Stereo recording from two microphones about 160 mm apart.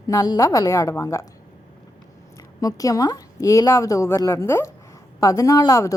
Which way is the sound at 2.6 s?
20° left (ahead or behind).